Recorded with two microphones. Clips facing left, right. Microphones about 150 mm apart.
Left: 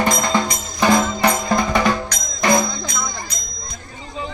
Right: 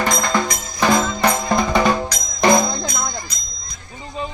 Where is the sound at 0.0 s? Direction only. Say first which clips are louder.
Left 1 dB; 15° left (ahead or behind).